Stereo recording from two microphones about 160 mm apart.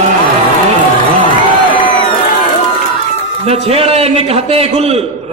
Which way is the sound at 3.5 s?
40° right (ahead or behind).